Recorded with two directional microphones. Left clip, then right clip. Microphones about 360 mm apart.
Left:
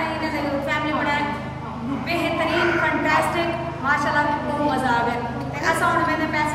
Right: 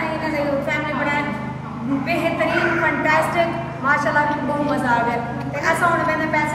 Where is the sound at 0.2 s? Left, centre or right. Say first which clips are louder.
Right 3 dB; centre.